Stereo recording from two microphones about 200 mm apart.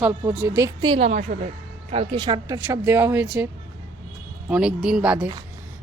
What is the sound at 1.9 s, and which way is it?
Speech, 25° right (ahead or behind).